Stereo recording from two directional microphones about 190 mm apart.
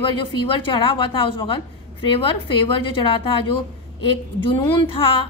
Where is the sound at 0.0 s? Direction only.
25° left (ahead or behind).